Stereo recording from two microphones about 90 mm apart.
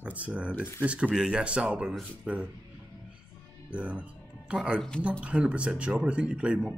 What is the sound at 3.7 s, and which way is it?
Speech, 15° right (ahead or behind).